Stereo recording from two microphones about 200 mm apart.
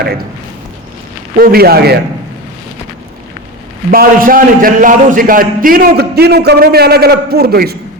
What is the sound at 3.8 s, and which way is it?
A man's voice, 45° right (ahead or behind).